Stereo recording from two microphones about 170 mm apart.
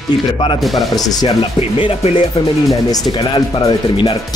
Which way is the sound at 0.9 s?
20° left (ahead or behind).